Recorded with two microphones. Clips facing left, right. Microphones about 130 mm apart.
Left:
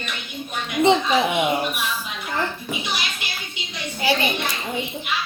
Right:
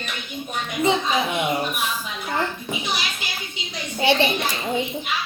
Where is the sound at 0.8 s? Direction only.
30° left (ahead or behind).